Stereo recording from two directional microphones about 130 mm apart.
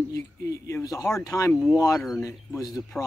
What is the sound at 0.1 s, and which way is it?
Speech, 25° left (ahead or behind).